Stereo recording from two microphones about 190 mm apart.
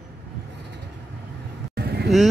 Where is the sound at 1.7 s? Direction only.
55° right (ahead or behind).